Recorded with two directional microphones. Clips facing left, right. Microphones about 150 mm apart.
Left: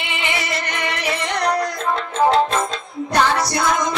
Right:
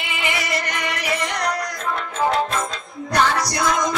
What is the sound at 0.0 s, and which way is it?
Music, 25° left (ahead or behind).